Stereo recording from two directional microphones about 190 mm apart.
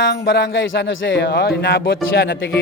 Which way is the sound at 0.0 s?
70° left (ahead or behind).